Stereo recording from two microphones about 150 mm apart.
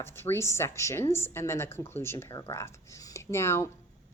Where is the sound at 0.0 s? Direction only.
15° left (ahead or behind).